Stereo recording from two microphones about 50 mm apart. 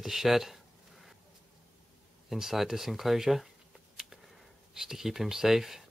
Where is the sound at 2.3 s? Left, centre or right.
Centre.